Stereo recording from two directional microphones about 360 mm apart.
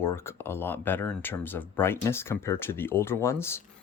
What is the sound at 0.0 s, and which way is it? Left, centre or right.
Speech, centre.